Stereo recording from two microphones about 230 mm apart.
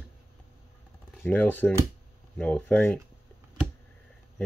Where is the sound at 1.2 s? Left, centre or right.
Centre.